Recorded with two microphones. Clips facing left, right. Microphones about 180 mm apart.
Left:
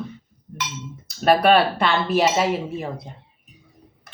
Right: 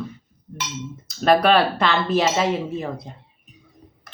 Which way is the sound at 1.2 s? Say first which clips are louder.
Even; 5° left (ahead or behind).